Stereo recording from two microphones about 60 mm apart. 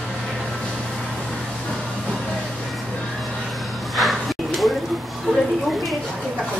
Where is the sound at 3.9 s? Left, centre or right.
Centre.